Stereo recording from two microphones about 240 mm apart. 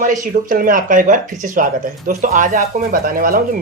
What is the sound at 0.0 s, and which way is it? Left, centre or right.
Speech, right.